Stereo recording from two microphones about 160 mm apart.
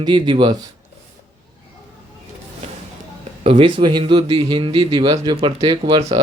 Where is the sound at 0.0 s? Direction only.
30° right (ahead or behind).